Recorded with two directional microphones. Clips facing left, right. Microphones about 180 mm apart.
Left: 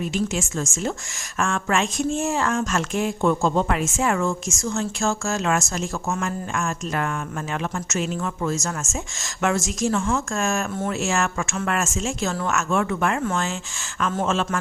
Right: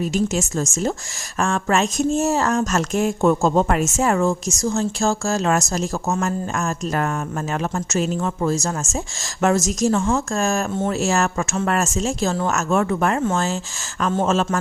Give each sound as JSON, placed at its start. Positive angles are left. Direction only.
{"t": 0.0, "sound": "speech", "side_deg": -40}